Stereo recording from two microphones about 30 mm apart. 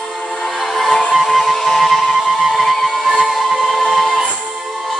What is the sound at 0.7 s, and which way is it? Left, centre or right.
Music, centre.